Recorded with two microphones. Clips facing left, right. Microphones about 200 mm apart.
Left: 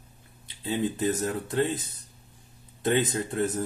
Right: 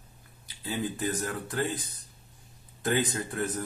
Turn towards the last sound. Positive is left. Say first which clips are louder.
# left 4 dB
turn(degrees=25)  # may be behind; listen again after turning